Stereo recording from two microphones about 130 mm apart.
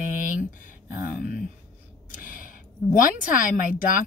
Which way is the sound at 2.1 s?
90° left.